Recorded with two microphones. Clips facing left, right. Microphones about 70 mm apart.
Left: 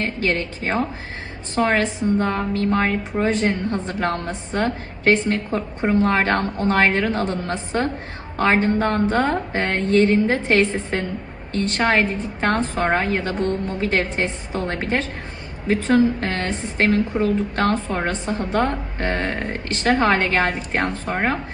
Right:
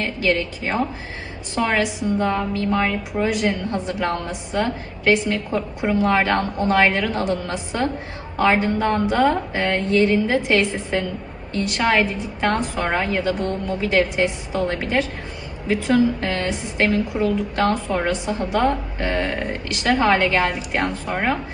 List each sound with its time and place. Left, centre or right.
0.0 s a woman's voice: left